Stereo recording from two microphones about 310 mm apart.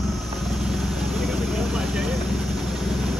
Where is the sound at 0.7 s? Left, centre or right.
Centre.